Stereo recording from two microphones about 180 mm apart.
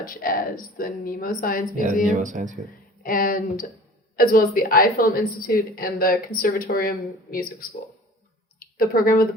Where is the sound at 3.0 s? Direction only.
50° left (ahead or behind).